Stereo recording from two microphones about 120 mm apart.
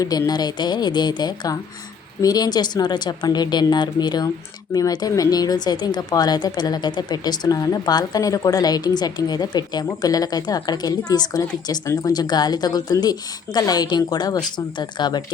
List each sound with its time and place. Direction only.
0.0 s speech: 30° left (ahead or behind)